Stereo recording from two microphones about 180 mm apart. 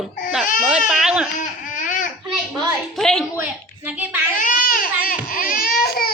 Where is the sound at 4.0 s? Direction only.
10° right (ahead or behind).